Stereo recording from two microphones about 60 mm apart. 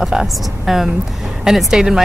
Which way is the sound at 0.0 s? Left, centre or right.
Centre.